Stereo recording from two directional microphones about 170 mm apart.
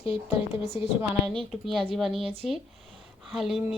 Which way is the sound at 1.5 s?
Centre (ahead or behind).